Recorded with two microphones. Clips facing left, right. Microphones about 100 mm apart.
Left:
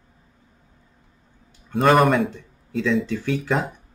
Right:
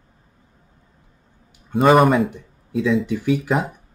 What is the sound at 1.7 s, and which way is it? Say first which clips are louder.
Speech: right 3 dB; centre (ahead or behind).